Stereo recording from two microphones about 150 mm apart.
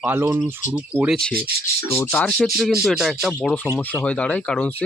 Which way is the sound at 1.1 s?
5° left (ahead or behind).